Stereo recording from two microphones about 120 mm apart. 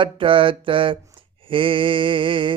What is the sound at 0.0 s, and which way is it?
Mantra, 45° right (ahead or behind).